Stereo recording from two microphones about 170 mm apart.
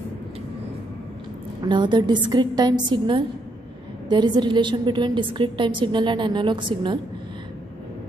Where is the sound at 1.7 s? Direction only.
25° right (ahead or behind).